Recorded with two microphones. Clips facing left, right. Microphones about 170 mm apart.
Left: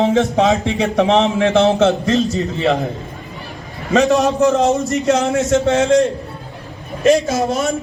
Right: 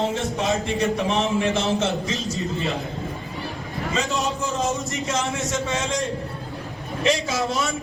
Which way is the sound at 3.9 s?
70° left (ahead or behind).